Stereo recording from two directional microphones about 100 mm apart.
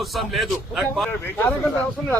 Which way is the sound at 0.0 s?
Centre (ahead or behind).